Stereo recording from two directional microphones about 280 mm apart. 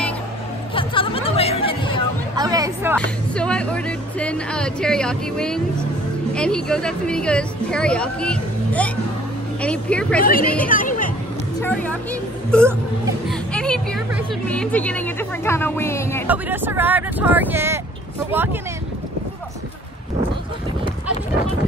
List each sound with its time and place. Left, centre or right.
0.7 s speech: centre
2.3 s speech: centre
3.0 s speech: centre
10.7 s a sound: left
11.6 s a woman's voice: centre
16.3 s speech: centre